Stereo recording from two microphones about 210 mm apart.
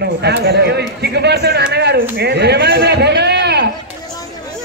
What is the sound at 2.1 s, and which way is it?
Chop, 50° right (ahead or behind).